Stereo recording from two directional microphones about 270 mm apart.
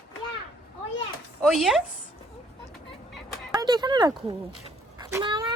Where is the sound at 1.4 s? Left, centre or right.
Centre.